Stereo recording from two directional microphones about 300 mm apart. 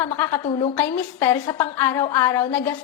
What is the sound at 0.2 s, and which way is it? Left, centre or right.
A woman's voice, centre.